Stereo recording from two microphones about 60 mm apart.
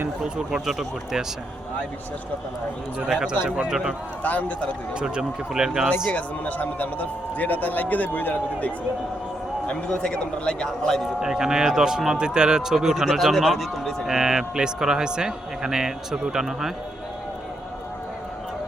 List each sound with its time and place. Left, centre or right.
0.3 s speech: centre
3.1 s speech: centre
4.2 s a man's voice: left
4.9 s speech: centre
6.1 s a man's voice: left
9.6 s a man's voice: centre
11.2 s speech: centre